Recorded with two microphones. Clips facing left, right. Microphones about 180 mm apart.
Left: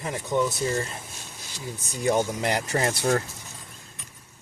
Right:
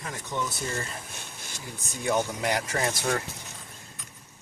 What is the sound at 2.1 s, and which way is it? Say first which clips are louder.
Speech: even; 30° left (ahead or behind).